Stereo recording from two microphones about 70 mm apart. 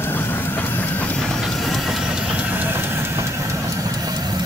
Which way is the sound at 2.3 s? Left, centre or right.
Right.